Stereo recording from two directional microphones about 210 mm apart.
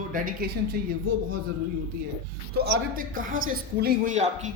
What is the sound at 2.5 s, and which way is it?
Speech, 45° right (ahead or behind).